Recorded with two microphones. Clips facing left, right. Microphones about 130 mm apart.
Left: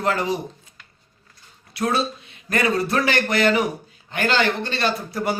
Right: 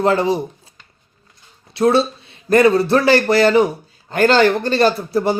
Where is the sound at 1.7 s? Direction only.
30° right (ahead or behind).